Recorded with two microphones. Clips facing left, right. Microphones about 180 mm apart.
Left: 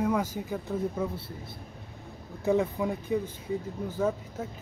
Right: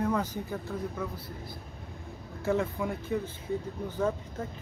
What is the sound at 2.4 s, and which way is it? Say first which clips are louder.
Speech: left 3 dB; 15° left (ahead or behind).